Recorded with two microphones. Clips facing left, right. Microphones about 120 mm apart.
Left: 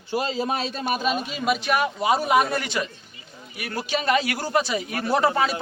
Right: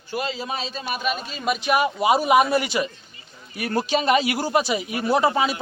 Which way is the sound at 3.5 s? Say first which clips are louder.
Right 5 dB; 30° right (ahead or behind).